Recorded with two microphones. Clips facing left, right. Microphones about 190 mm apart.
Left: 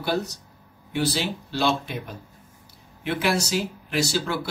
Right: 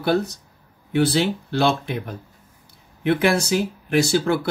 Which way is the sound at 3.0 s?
55° right (ahead or behind).